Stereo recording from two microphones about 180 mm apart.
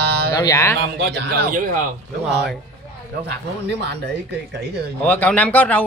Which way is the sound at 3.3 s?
70° right (ahead or behind).